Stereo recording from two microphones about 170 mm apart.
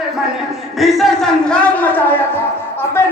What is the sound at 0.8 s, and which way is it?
A man's voice, centre (ahead or behind).